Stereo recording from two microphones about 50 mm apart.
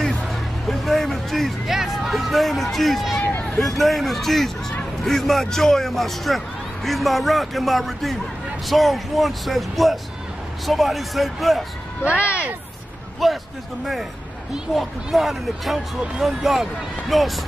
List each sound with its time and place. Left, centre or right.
0.0 s a sound: centre
3.5 s a man's voice: centre
12.2 s speech: left
13.2 s a man's voice: centre
14.7 s a man's voice: centre